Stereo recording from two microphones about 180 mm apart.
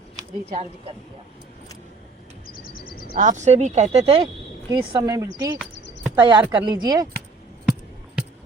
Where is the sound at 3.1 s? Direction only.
45° right (ahead or behind); by 5.5 s 20° right (ahead or behind).